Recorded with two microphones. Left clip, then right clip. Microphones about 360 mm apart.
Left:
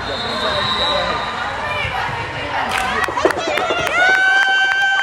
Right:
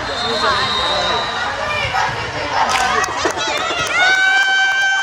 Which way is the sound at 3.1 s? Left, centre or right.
Centre.